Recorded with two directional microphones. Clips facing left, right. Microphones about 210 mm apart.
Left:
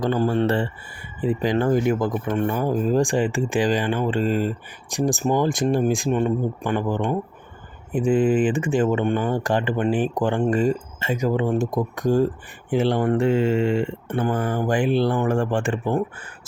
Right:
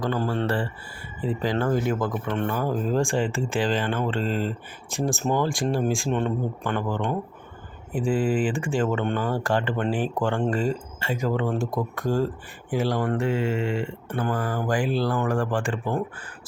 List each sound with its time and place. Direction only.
0.0 s speech: 20° left (ahead or behind)
6.1 s speech: 10° left (ahead or behind)